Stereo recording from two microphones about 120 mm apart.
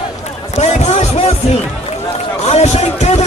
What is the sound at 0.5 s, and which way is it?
Speech, 65° left (ahead or behind).